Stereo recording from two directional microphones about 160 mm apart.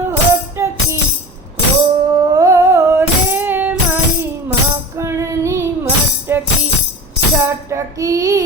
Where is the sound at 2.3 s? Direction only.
20° right (ahead or behind).